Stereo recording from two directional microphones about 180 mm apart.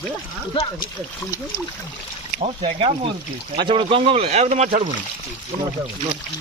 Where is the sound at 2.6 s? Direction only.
30° right (ahead or behind).